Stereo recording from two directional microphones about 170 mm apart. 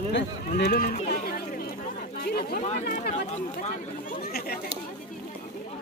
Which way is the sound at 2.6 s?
45° left (ahead or behind).